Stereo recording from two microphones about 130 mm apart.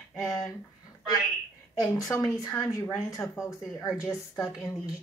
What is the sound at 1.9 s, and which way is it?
Speech, 25° left (ahead or behind).